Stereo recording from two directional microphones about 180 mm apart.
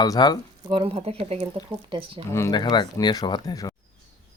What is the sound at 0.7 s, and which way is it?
Speech, 30° right (ahead or behind).